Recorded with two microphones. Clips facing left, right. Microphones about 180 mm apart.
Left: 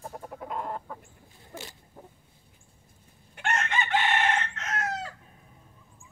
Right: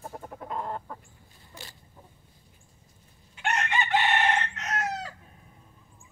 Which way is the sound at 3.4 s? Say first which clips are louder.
Right 1 dB; centre (ahead or behind).